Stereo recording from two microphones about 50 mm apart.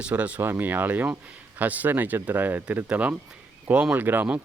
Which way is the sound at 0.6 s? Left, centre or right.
Right.